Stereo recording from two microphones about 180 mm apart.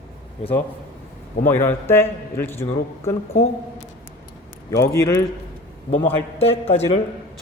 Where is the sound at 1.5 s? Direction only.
10° left (ahead or behind).